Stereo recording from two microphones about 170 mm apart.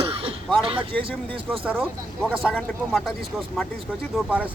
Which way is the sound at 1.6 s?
10° right (ahead or behind).